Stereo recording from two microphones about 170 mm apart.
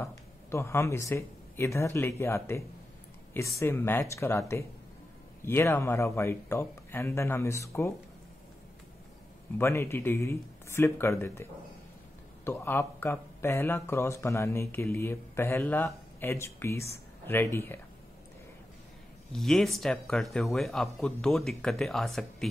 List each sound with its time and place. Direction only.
0.0 s speech: 15° left (ahead or behind)
9.6 s speech: 15° left (ahead or behind)
12.4 s speech: 15° left (ahead or behind)
19.3 s speech: centre (ahead or behind)